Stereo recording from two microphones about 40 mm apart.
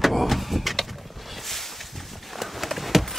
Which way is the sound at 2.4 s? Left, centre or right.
Centre.